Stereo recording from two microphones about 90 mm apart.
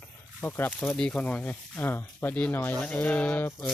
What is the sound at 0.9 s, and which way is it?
Speech, 10° left (ahead or behind).